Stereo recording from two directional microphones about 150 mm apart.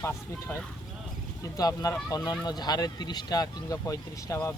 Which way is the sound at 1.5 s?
25° left (ahead or behind).